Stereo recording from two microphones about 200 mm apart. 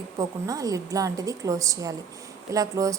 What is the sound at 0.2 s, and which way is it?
A woman's voice, 15° right (ahead or behind).